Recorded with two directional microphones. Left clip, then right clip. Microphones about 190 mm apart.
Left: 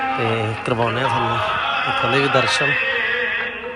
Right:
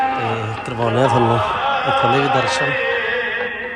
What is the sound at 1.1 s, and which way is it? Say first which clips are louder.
Speech: right 3 dB; 50° right (ahead or behind).